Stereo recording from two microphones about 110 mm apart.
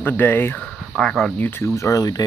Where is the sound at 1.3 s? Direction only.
20° left (ahead or behind); by 2.2 s 35° left (ahead or behind).